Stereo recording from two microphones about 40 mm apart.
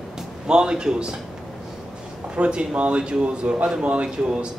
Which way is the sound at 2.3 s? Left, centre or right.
Right.